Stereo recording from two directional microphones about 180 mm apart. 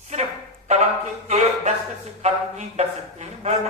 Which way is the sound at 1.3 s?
35° right (ahead or behind).